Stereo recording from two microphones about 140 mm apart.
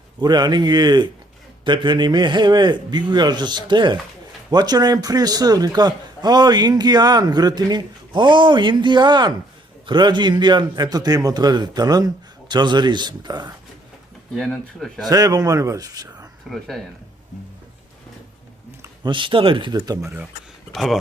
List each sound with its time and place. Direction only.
0.2 s a man's voice: 30° right (ahead or behind)
14.3 s speech: 5° left (ahead or behind)
15.1 s a man's voice: 25° right (ahead or behind)
16.5 s speech: centre (ahead or behind)
19.0 s a man's voice: 35° right (ahead or behind)
20.7 s speech: centre (ahead or behind)